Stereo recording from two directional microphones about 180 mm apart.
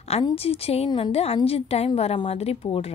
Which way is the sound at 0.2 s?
35° left (ahead or behind).